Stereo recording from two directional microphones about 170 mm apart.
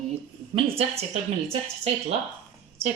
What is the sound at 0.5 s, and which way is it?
Speech, 35° right (ahead or behind).